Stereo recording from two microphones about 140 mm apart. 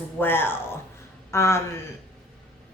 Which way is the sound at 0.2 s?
15° left (ahead or behind).